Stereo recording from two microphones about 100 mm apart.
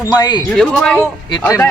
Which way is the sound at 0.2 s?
45° left (ahead or behind).